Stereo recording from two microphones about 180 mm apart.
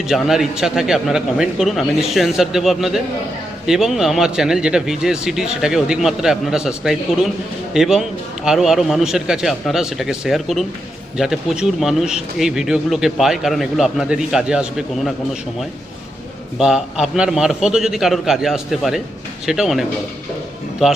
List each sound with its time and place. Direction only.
0.1 s speech: centre (ahead or behind)
16.6 s speech: 5° right (ahead or behind)
20.8 s speech: 5° right (ahead or behind)